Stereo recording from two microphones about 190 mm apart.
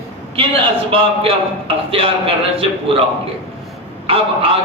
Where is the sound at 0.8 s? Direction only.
30° right (ahead or behind).